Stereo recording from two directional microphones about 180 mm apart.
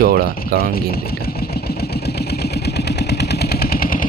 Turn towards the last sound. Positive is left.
turn(degrees=55)  # may be behind; listen again after turning